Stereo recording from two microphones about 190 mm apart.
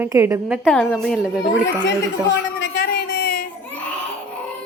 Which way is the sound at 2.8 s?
55° left (ahead or behind).